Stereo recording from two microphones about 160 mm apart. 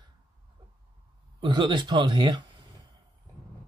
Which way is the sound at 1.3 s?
30° right (ahead or behind).